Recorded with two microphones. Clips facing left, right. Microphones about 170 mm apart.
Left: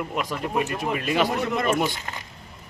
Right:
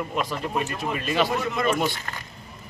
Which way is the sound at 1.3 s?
55° left (ahead or behind).